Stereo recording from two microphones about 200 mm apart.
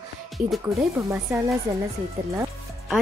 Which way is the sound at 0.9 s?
15° right (ahead or behind).